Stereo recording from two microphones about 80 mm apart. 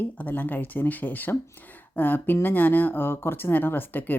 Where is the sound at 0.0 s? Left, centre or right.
Left.